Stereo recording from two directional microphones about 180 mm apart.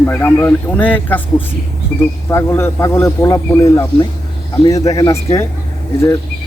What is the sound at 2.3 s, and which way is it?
Speech, 15° left (ahead or behind).